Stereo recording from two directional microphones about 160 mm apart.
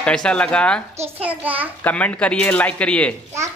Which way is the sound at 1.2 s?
10° right (ahead or behind).